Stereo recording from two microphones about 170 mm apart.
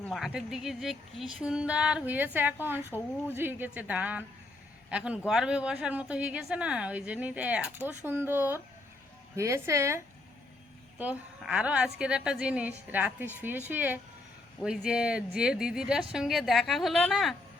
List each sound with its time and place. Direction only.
0.0 s a woman's voice: centre (ahead or behind)